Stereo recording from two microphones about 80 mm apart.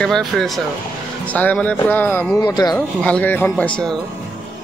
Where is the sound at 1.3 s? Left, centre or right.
Centre.